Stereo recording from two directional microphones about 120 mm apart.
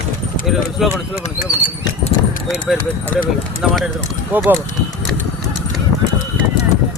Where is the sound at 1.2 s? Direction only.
65° left (ahead or behind).